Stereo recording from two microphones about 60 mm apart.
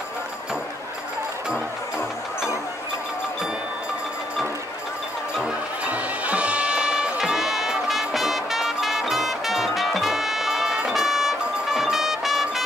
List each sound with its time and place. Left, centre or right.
5.9 s music: right; by 12.6 s centre